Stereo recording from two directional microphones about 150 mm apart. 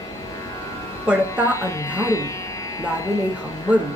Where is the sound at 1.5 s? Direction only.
20° left (ahead or behind).